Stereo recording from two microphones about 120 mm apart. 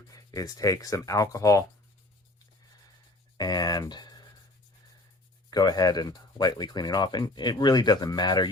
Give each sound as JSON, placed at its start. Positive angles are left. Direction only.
{"t": 0.1, "sound": "speech", "side_deg": 30}
{"t": 3.3, "sound": "speech", "side_deg": 35}
{"t": 5.5, "sound": "speech", "side_deg": 35}